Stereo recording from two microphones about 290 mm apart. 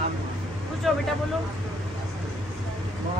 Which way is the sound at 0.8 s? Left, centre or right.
Centre.